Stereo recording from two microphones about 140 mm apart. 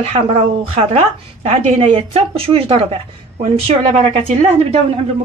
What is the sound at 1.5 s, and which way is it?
A woman's voice, 45° right (ahead or behind).